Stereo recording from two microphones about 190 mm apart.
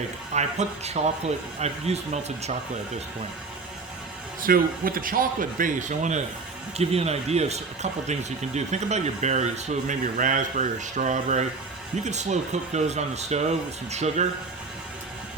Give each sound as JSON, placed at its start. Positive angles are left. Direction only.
{"t": 0.3, "sound": "speech", "side_deg": -35}
{"t": 4.4, "sound": "speech", "side_deg": -50}